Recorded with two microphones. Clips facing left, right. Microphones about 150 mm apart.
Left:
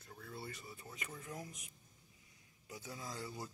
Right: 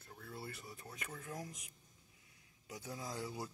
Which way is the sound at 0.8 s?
10° left (ahead or behind).